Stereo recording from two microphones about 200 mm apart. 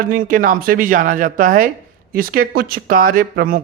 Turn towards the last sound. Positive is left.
turn(degrees=-45)  # may be behind; listen again after turning